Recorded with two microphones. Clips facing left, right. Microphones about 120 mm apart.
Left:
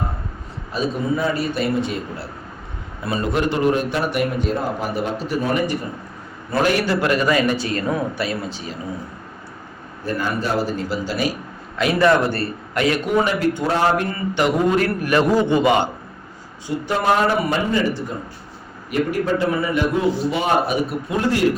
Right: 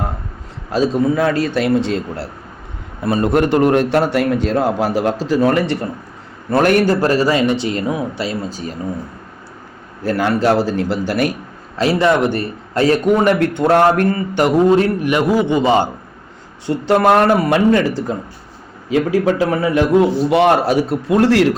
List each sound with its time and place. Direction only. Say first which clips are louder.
0.7 s a man's voice: right 7 dB; 90° right
3.0 s a man's voice: right 6 dB; 50° right (ahead or behind); by 5.9 s 75° right (ahead or behind)
6.5 s a man's voice: right 6 dB; 55° right (ahead or behind); by 8.4 s 25° right (ahead or behind)
8.4 s speech: right 4 dB; 45° right (ahead or behind)
10.0 s a man's voice: right 7 dB; 90° right; by 11.3 s 60° right (ahead or behind)
11.8 s speech: right 3 dB; 30° right (ahead or behind)
12.0 s a man's voice: even; 20° right (ahead or behind)
12.7 s a man's voice: right 6 dB; 35° right (ahead or behind)
13.2 s speech: right 6 dB; 65° right (ahead or behind)
14.1 s speech: right 5 dB; 40° right (ahead or behind)
14.8 s a man's voice: right 3 dB; 20° right (ahead or behind)
15.6 s speech: right 3 dB; 35° right (ahead or behind)
16.6 s a man's voice: right 6 dB; 65° right (ahead or behind); by 21.4 s 85° right